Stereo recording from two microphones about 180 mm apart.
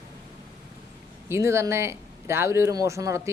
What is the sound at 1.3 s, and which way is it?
Speech, 15° right (ahead or behind).